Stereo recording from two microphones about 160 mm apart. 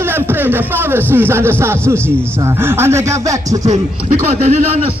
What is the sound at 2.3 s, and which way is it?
Speech, 15° right (ahead or behind).